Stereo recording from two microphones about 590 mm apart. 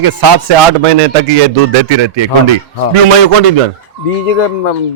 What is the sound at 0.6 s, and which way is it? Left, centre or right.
Speech, right.